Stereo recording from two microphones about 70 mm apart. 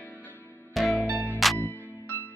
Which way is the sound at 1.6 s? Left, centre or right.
Left.